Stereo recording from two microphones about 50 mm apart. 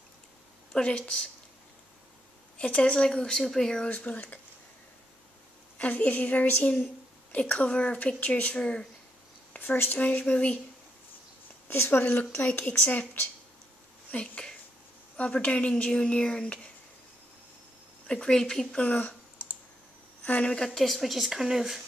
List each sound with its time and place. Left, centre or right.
0.7 s a woman's voice: left
2.5 s a woman's voice: left
3.9 s speech: left
5.8 s a woman's voice: left
9.6 s speech: left
11.7 s speech: left
12.1 s speech: left
14.1 s a woman's voice: centre
18.0 s speech: centre
20.4 s speech: centre